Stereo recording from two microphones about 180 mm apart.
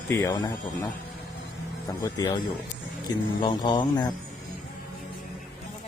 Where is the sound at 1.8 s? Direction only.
20° left (ahead or behind).